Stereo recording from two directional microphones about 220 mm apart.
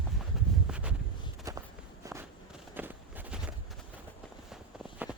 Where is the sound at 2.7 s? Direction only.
10° right (ahead or behind).